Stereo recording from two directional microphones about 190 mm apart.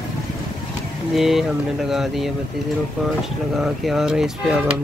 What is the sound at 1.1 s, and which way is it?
Speech, centre (ahead or behind).